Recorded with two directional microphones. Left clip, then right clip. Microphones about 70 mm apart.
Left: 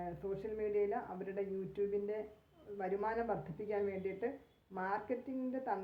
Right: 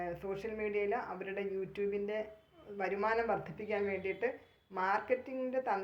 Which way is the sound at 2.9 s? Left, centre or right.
Left.